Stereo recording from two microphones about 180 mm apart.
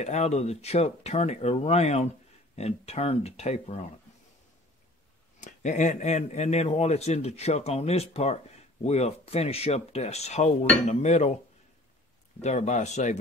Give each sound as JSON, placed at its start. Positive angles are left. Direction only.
{"t": 0.0, "sound": "speech", "side_deg": 40}
{"t": 5.4, "sound": "speech", "side_deg": 40}
{"t": 12.4, "sound": "speech", "side_deg": 40}